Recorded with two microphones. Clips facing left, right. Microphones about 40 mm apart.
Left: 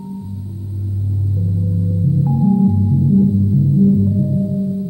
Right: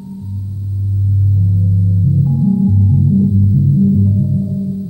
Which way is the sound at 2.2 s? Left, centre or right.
Centre.